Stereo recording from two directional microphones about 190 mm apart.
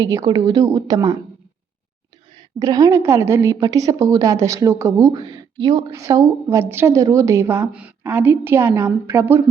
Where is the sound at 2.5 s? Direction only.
20° right (ahead or behind).